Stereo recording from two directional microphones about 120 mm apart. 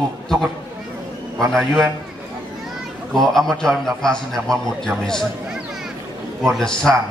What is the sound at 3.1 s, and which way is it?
A man's voice, 5° left (ahead or behind).